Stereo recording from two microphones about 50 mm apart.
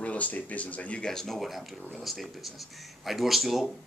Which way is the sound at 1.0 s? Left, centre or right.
Centre.